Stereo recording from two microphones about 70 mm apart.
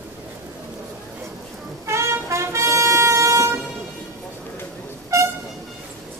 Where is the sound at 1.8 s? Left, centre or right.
Right.